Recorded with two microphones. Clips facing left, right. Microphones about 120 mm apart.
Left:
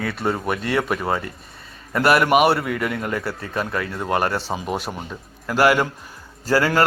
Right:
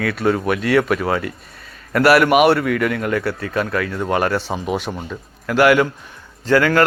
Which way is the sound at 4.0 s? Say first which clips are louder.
Right 2 dB; centre (ahead or behind).